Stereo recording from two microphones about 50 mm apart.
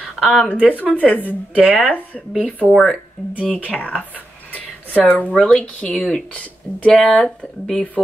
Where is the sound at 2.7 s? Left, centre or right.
Centre.